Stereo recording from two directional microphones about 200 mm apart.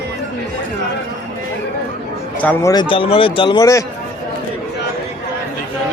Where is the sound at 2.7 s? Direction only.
25° left (ahead or behind).